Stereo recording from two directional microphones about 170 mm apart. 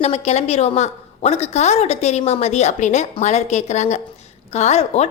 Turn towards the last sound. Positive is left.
turn(degrees=40)  # may be behind; listen again after turning